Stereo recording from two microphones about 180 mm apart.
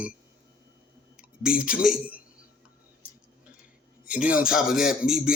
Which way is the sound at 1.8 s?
5° right (ahead or behind).